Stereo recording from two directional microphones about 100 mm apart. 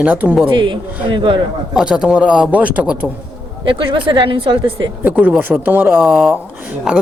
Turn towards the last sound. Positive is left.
turn(degrees=-10)  # may be behind; listen again after turning